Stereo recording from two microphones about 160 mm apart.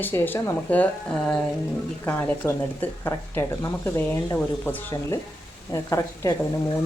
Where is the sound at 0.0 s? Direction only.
15° left (ahead or behind).